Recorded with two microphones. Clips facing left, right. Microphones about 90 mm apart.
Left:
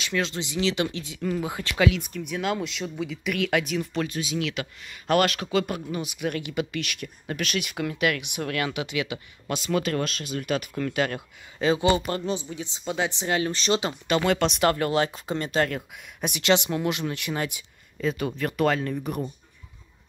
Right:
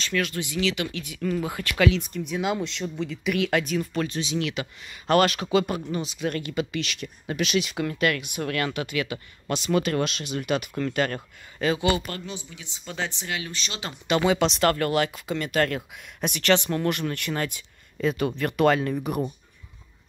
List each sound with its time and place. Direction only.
0.0 s speech: 20° left (ahead or behind)
1.2 s speech: 15° left (ahead or behind)
1.9 s speech: 5° left (ahead or behind)
3.8 s speech: 10° left (ahead or behind)
11.6 s a woman's voice: 25° left (ahead or behind)
12.8 s speech: 10° left (ahead or behind)
13.3 s a woman's voice: 35° left (ahead or behind)
14.1 s speech: 20° left (ahead or behind); by 15.6 s 35° left (ahead or behind)
15.7 s speech: 5° left (ahead or behind)
16.4 s speech: 15° left (ahead or behind)
18.0 s speech: centre (ahead or behind)